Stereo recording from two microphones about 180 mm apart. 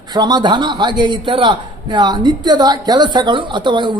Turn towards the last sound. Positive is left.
turn(degrees=-25)  # may be behind; listen again after turning